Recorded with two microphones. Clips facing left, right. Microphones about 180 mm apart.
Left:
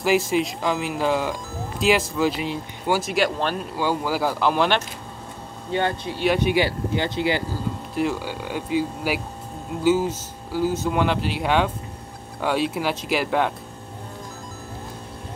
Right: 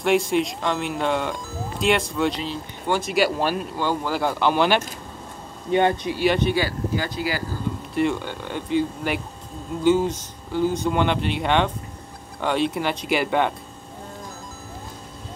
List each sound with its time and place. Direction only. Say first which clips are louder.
0.0 s speech: even; centre (ahead or behind)
2.4 s speech: left 2 dB; 15° left (ahead or behind)
3.0 s speech: right 1 dB; centre (ahead or behind)
3.7 s speech: left 1 dB; 10° left (ahead or behind)
5.7 s speech: right 4 dB; 15° right (ahead or behind)
6.2 s speech: even; 5° left (ahead or behind)
6.5 s speech: left 2 dB; 20° left (ahead or behind)
7.9 s speech: right 2 dB; centre (ahead or behind)